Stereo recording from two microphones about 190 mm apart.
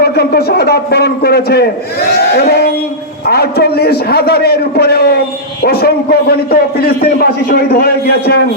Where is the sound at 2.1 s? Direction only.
55° left (ahead or behind).